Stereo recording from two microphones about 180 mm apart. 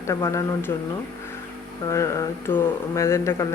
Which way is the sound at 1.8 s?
15° left (ahead or behind).